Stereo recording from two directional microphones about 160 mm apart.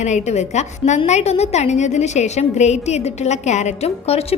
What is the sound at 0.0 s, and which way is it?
A woman's voice, 45° left (ahead or behind).